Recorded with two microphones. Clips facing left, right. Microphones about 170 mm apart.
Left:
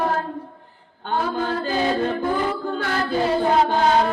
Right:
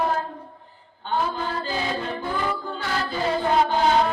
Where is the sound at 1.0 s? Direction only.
50° left (ahead or behind).